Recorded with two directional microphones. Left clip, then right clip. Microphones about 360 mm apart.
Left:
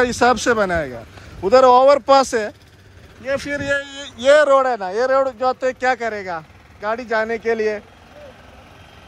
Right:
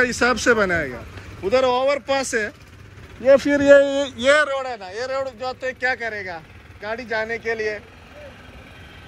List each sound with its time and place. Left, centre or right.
0.0 s speech: centre
3.3 s speech: centre
4.6 s speech: left